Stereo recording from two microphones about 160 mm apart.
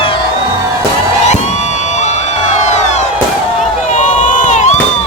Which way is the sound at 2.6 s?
45° left (ahead or behind).